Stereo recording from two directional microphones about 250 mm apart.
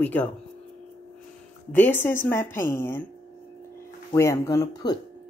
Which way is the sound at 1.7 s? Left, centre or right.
Centre.